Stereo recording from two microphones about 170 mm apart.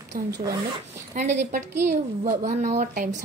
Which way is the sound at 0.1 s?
55° right (ahead or behind).